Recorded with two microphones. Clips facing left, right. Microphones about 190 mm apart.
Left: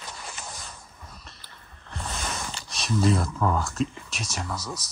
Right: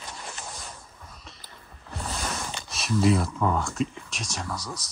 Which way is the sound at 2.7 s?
5° right (ahead or behind).